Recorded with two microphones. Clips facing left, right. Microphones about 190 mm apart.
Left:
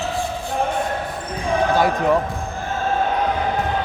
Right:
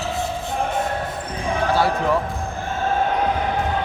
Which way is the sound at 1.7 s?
15° left (ahead or behind).